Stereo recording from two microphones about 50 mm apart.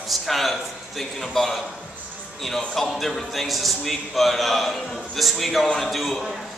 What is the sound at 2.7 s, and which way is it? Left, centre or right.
A man's voice, centre.